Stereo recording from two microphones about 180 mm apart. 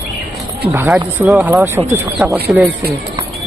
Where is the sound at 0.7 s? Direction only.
10° right (ahead or behind).